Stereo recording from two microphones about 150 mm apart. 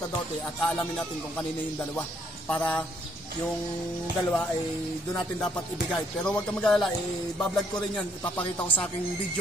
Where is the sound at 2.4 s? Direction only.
10° left (ahead or behind).